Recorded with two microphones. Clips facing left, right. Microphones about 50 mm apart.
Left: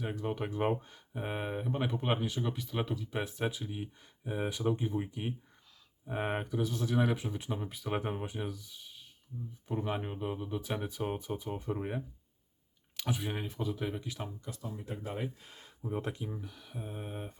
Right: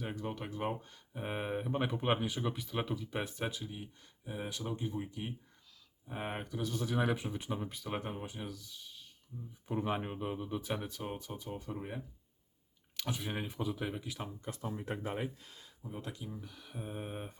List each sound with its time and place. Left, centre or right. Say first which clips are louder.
0.0 s speech: left 4 dB; centre
0.3 s speech: left 6 dB; centre
9.6 s speech: even; centre
10.8 s speech: left 6 dB; centre
13.0 s speech: left 3 dB; centre
13.3 s speech: left 1 dB; centre
14.4 s speech: right 2 dB; right
15.4 s speech: left 8 dB; left
16.4 s speech: left 2 dB; centre
16.8 s speech: even; centre